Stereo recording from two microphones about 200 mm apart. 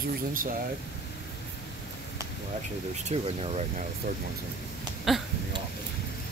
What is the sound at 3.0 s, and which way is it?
Speech, 30° right (ahead or behind).